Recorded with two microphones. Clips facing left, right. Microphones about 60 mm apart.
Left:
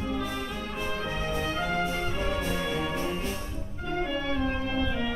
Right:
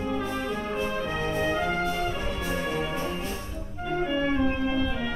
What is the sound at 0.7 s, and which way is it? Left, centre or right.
Music, centre.